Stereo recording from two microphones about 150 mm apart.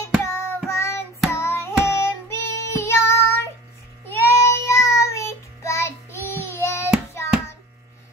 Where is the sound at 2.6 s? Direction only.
20° left (ahead or behind).